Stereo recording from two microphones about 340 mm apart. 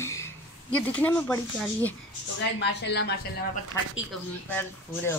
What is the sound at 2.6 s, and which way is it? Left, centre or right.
Speech, left.